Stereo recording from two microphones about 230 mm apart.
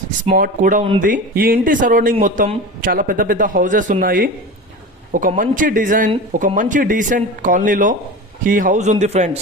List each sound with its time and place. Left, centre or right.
0.3 s a man's voice: right